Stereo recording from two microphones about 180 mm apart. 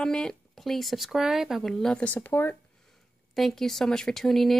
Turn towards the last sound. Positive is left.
turn(degrees=0)  # may be behind; listen again after turning